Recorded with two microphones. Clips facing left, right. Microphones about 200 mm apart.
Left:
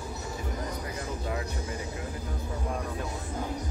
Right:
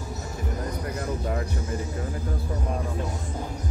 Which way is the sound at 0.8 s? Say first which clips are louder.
Right 5 dB; 50° right (ahead or behind).